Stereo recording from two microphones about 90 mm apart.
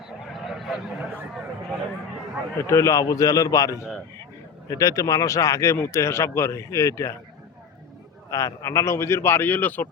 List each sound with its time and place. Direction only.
0.4 s a sound: centre (ahead or behind)
2.6 s speech: 35° left (ahead or behind)
8.3 s a man's voice: 35° left (ahead or behind); by 9.9 s 20° left (ahead or behind)